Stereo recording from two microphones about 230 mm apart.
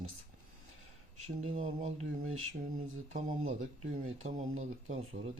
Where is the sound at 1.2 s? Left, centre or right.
Right.